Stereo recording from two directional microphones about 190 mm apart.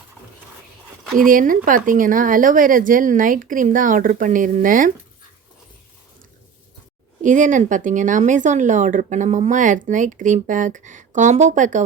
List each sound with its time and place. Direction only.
1.3 s speech: 45° right (ahead or behind)
7.2 s speech: 40° right (ahead or behind)